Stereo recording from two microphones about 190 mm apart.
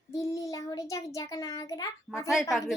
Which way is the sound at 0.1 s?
15° left (ahead or behind).